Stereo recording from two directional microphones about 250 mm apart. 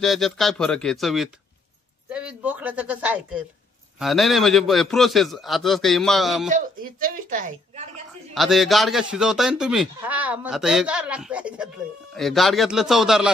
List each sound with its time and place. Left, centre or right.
0.0 s speech: centre
6.5 s speech: right
8.4 s speech: centre